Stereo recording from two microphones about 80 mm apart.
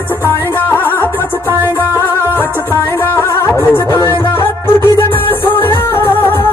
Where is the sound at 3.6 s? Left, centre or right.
Left.